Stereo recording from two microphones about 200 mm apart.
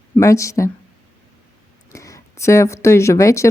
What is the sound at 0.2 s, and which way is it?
Speech, 15° left (ahead or behind).